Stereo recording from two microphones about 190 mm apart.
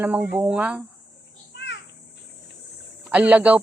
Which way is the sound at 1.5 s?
65° left (ahead or behind).